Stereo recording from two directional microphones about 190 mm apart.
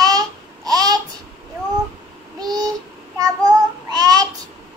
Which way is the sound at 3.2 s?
20° right (ahead or behind).